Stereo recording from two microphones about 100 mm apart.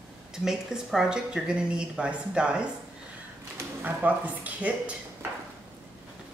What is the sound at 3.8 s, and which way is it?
Speech, 15° right (ahead or behind).